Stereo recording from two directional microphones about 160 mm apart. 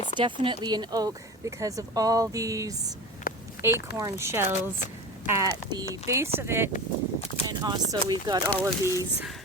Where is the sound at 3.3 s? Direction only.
65° left (ahead or behind).